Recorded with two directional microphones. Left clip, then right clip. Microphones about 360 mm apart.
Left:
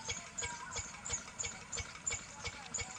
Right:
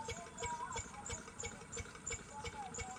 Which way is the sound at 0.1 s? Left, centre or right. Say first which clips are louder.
Left 6 dB; centre.